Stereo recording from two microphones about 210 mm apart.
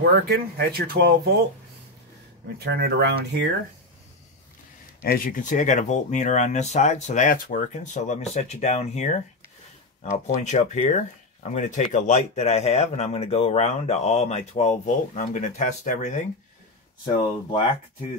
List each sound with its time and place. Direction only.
0.0 s speech: 50° right (ahead or behind)
2.6 s speech: 55° right (ahead or behind)
5.0 s a man's voice: 45° left (ahead or behind)
17.0 s speech: 20° left (ahead or behind)